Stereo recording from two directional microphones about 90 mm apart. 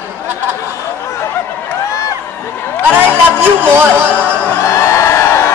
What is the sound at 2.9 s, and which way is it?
Speech, 25° right (ahead or behind).